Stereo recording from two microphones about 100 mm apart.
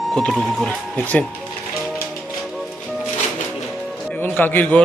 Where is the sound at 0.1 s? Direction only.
5° left (ahead or behind).